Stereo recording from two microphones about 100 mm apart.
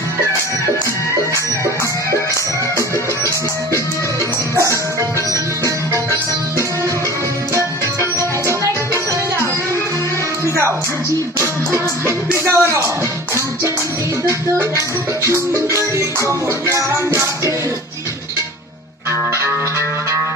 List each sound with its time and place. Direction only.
4.5 s music: 30° right (ahead or behind)
8.4 s music: 35° right (ahead or behind)
12.5 s speech: 25° right (ahead or behind)
14.3 s music: 25° right (ahead or behind)
19.3 s music: 25° right (ahead or behind)